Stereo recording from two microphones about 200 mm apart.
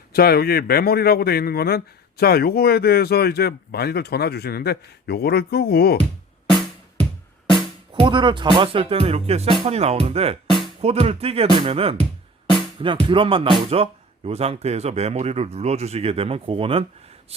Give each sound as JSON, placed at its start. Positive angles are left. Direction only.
{"t": 0.1, "sound": "a man's voice", "side_deg": 50}
{"t": 7.9, "sound": "speech", "side_deg": -25}